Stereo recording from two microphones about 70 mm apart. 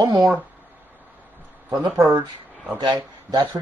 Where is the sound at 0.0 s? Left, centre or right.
Right.